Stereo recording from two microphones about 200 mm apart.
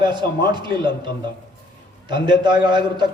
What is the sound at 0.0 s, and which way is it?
A man's voice, 20° right (ahead or behind).